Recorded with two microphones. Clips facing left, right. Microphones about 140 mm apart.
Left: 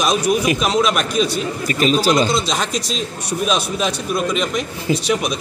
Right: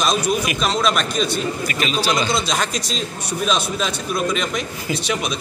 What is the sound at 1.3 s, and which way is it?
Speech, 40° left (ahead or behind).